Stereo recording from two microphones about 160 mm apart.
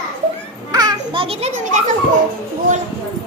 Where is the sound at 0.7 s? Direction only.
25° right (ahead or behind); by 1.8 s 40° right (ahead or behind).